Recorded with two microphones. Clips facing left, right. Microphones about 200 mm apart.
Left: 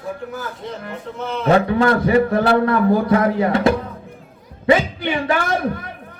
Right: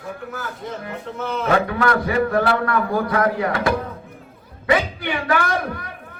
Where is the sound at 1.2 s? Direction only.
Centre (ahead or behind).